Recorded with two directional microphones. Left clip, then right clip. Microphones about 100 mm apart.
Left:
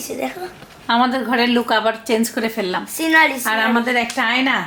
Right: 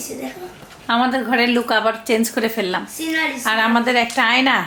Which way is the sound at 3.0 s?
30° left (ahead or behind).